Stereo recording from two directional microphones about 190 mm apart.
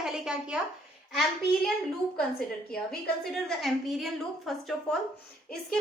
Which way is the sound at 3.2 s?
Centre (ahead or behind).